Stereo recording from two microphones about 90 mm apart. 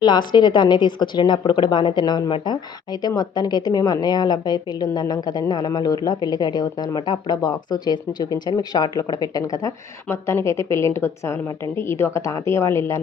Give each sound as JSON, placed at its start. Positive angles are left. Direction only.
{"t": 0.0, "sound": "a woman's voice", "side_deg": 55}
{"t": 10.1, "sound": "a woman's voice", "side_deg": 30}